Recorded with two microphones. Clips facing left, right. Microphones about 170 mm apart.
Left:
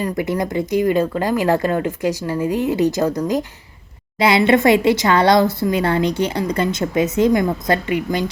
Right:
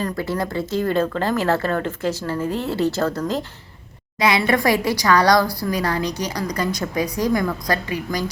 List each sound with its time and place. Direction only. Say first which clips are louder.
0.0 s a woman's voice: left 3 dB; 20° left (ahead or behind)
4.2 s a woman's voice: left 5 dB; 25° left (ahead or behind)